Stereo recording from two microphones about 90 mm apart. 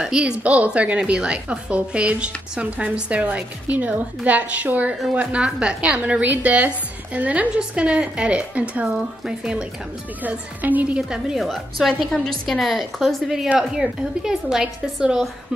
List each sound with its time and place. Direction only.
0.0 s a woman's voice: 10° right (ahead or behind)
11.4 s a woman's voice: 5° left (ahead or behind)